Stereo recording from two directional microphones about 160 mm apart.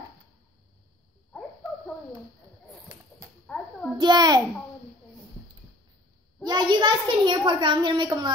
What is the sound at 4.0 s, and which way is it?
Speech, 25° right (ahead or behind).